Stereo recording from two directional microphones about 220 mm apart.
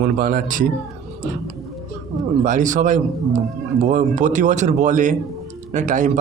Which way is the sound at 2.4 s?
35° right (ahead or behind).